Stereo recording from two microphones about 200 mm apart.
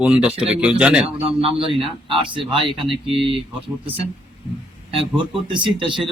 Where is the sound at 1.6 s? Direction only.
25° right (ahead or behind).